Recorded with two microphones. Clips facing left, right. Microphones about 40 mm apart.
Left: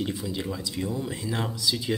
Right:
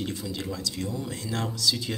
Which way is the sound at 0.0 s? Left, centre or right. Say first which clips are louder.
Left 2 dB; centre.